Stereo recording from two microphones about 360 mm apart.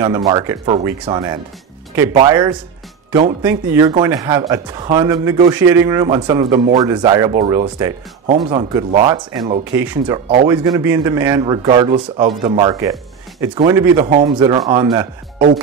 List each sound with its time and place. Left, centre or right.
0.0 s speech: centre
15.3 s music: right